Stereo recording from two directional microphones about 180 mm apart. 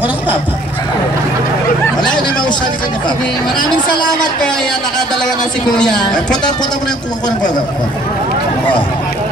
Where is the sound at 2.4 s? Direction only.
25° left (ahead or behind).